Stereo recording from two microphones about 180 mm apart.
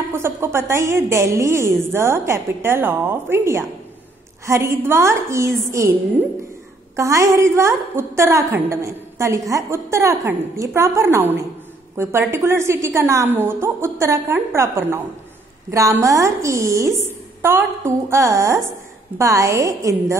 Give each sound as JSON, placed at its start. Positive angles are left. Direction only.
{"t": 0.1, "sound": "a woman's voice", "side_deg": -15}
{"t": 7.0, "sound": "a woman's voice", "side_deg": -15}